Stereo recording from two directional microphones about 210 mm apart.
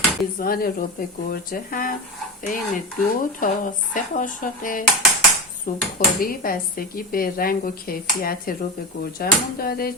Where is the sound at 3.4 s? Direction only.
40° left (ahead or behind).